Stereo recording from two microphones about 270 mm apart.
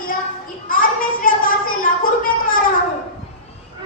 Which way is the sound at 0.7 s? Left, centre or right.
Left.